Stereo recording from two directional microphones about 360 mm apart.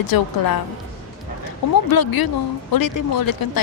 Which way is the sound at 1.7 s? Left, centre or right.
Left.